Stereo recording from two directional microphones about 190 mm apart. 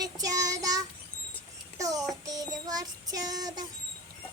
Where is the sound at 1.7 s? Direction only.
20° right (ahead or behind).